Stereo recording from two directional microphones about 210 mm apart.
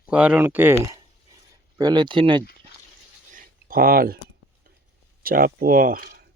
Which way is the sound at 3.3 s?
45° right (ahead or behind).